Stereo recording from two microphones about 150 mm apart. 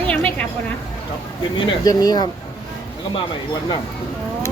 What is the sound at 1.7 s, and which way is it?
Speech, 25° left (ahead or behind).